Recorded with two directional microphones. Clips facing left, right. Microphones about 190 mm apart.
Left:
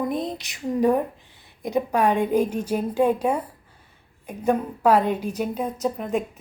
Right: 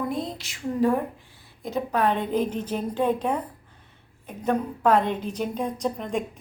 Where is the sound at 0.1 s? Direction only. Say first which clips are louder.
Left 3 dB; 20° left (ahead or behind).